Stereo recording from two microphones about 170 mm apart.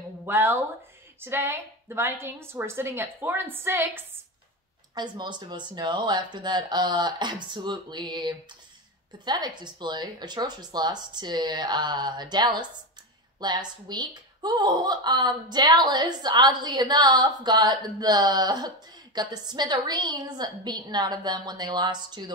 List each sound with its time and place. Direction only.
0.2 s a woman's voice: 10° right (ahead or behind)
4.9 s speech: 25° right (ahead or behind)